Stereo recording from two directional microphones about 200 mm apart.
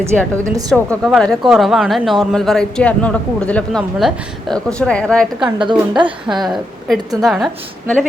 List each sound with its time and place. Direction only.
0.7 s a woman's voice: centre (ahead or behind)
5.5 s a woman's voice: 25° right (ahead or behind)
6.2 s a woman's voice: centre (ahead or behind)